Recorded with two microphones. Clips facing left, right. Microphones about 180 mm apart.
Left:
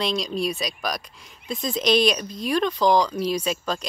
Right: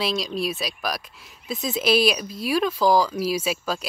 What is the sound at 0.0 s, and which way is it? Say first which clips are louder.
Speech: left 1 dB; centre (ahead or behind).